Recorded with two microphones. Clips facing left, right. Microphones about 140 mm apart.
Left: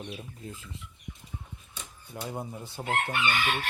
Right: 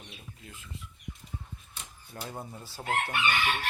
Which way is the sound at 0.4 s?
30° left (ahead or behind).